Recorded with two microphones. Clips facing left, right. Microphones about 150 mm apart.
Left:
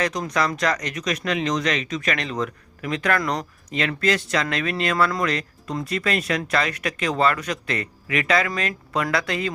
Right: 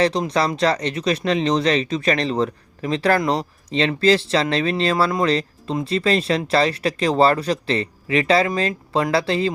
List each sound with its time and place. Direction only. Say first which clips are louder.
0.0 s speech: right 5 dB; 30° right (ahead or behind)